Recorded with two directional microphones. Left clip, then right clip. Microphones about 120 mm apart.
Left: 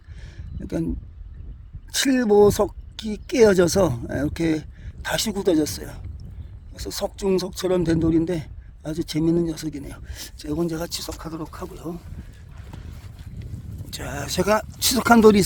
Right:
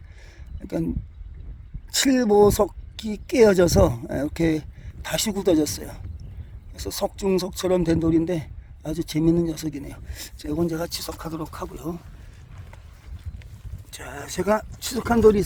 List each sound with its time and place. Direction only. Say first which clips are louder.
0.6 s a man's voice: even; 10° right (ahead or behind)
11.2 s speech: right 1 dB; 25° right (ahead or behind)
13.9 s speech: left 4 dB; 15° left (ahead or behind)
14.4 s speech: left 1 dB; 35° left (ahead or behind)
14.8 s speech: left 5 dB; 55° left (ahead or behind)